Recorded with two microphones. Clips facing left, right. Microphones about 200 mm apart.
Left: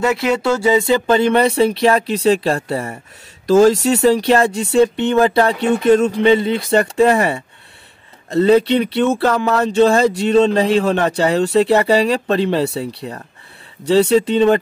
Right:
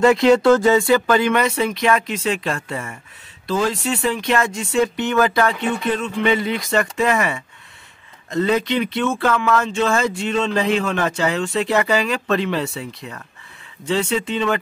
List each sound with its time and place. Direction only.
0.0 s speech: 5° left (ahead or behind); by 14.6 s 35° left (ahead or behind)